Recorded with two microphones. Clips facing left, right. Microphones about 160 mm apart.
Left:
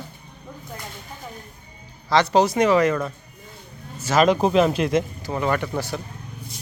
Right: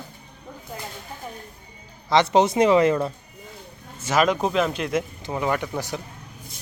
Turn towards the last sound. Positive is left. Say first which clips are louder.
# left 2 dB
turn(degrees=-15)  # may be behind; listen again after turning